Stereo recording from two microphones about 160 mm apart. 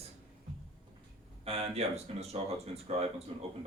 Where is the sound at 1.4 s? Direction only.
40° right (ahead or behind).